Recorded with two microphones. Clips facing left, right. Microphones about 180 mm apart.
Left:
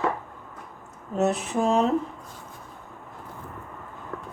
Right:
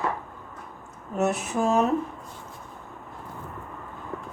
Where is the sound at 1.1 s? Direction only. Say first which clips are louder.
Left 1 dB; 30° left (ahead or behind).